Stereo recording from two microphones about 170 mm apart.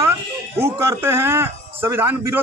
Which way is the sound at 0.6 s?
15° right (ahead or behind).